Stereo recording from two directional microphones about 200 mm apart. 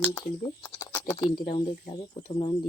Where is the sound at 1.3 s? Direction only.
25° left (ahead or behind).